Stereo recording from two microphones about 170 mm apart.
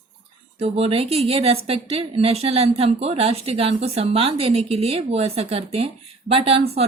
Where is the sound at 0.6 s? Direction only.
35° right (ahead or behind).